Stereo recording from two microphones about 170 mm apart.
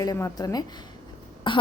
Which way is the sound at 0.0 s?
20° left (ahead or behind).